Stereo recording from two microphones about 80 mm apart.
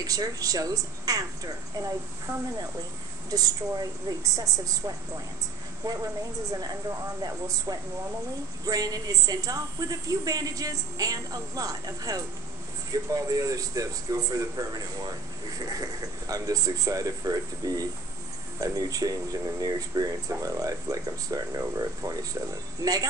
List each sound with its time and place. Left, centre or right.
0.0 s a man's voice: right